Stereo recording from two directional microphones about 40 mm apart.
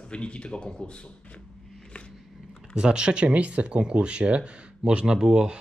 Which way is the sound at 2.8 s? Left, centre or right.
Right.